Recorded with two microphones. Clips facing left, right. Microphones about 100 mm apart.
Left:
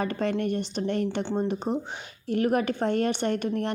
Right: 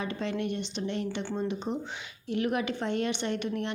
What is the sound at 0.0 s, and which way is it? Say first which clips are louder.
A woman's voice: left 5 dB; 50° left (ahead or behind).